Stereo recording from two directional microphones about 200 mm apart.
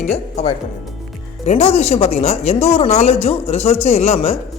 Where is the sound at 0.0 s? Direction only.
35° left (ahead or behind).